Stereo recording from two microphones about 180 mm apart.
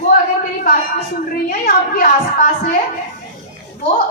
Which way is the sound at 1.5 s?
50° left (ahead or behind).